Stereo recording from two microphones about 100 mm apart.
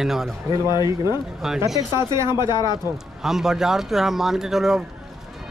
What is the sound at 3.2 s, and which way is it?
A man's voice, 5° right (ahead or behind).